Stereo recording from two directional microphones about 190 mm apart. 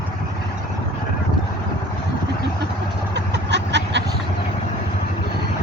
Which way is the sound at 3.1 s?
65° right (ahead or behind).